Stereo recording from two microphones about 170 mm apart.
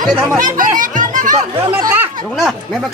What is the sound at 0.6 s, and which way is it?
Music, 50° right (ahead or behind).